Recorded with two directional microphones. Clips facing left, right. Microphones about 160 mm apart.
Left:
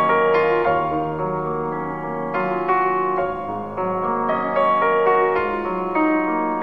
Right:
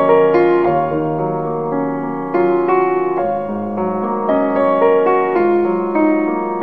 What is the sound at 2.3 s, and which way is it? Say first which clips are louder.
Music: right 11 dB; 35° right (ahead or behind).